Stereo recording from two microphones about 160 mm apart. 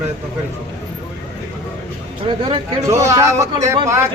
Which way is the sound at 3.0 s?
20° right (ahead or behind).